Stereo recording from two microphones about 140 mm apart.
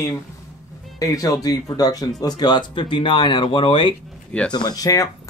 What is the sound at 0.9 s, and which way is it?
Speech, 25° left (ahead or behind).